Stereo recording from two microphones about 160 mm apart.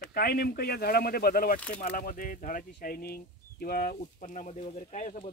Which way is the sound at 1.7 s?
55° left (ahead or behind).